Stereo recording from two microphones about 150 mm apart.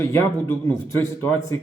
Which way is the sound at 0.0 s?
15° left (ahead or behind).